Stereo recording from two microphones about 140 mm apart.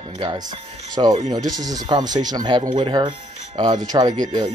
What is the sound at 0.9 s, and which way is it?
Speech, 30° right (ahead or behind).